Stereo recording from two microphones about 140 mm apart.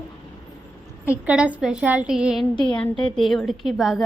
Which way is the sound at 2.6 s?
5° left (ahead or behind).